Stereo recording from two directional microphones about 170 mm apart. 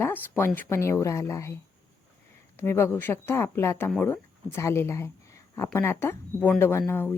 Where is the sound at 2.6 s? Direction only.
15° left (ahead or behind).